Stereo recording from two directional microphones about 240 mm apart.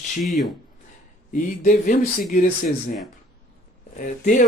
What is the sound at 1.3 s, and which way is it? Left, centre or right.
Speech, left.